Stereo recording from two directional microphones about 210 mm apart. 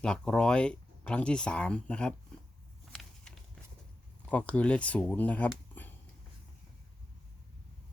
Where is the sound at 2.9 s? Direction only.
Centre (ahead or behind).